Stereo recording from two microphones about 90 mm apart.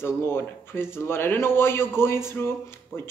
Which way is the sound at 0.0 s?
25° left (ahead or behind).